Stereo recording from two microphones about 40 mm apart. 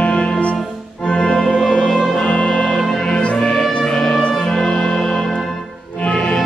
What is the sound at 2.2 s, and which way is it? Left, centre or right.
Music, left.